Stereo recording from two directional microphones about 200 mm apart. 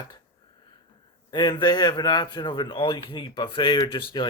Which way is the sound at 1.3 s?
20° left (ahead or behind).